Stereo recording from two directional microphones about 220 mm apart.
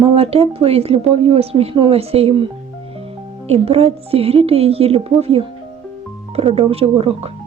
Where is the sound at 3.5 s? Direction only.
25° right (ahead or behind).